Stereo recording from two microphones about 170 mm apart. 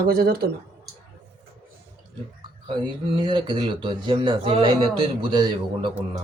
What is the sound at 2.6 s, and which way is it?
Speech, 30° right (ahead or behind).